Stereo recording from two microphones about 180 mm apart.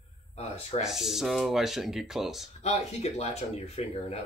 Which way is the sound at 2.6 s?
35° left (ahead or behind).